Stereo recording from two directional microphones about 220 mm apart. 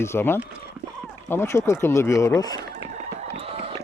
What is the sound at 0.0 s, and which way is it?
Speech, 10° left (ahead or behind).